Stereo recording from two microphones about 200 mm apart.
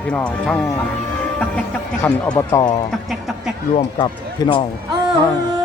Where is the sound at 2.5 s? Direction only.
20° left (ahead or behind).